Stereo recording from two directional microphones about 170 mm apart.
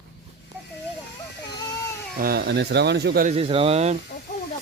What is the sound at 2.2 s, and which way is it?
Speech, 65° right (ahead or behind).